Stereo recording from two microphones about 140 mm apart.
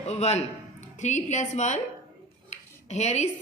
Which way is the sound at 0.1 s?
50° left (ahead or behind).